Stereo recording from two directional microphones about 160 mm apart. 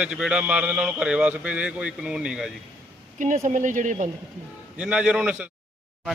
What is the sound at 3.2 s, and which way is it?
Speech, 50° right (ahead or behind).